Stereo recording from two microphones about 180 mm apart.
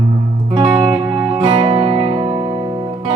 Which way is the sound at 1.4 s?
25° right (ahead or behind).